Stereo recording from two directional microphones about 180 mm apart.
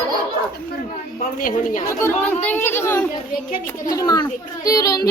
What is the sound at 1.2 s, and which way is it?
Speech, 50° left (ahead or behind).